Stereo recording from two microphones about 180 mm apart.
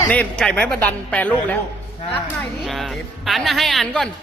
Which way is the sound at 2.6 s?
Centre (ahead or behind).